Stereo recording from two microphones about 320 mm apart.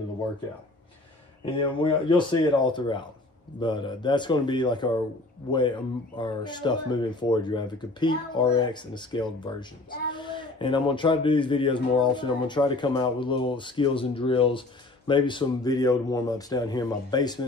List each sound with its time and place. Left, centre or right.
1.4 s speech: centre